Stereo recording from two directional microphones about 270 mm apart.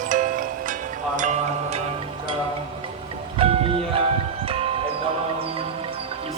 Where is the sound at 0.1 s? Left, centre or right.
Right.